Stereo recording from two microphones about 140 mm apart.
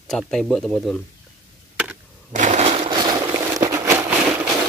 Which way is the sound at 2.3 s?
60° right (ahead or behind).